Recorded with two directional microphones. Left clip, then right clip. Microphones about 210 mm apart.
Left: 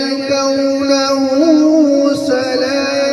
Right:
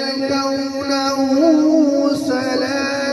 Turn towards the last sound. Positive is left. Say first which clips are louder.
# left 5 dB
turn(degrees=45)  # may be behind; listen again after turning